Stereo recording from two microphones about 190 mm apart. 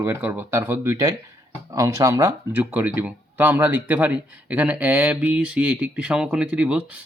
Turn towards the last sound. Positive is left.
turn(degrees=-5)  # may be behind; listen again after turning